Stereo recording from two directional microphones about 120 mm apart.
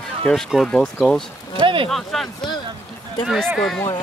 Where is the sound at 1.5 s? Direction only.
45° right (ahead or behind).